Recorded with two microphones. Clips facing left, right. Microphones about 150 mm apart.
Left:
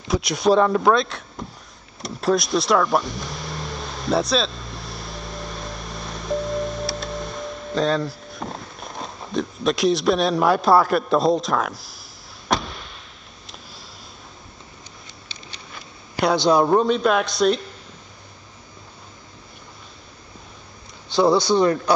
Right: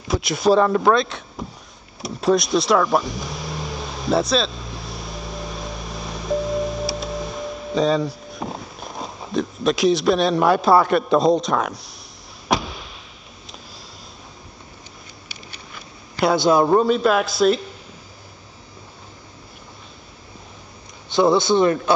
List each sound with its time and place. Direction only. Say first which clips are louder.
0.1 s a man's voice: right 1 dB; centre (ahead or behind)
2.0 s vehicle: right 2 dB; centre (ahead or behind)
12.4 s a sound: right 2 dB; centre (ahead or behind)
16.2 s a man's voice: right 1 dB; centre (ahead or behind)
21.3 s a man's voice: right 1 dB; 20° right (ahead or behind)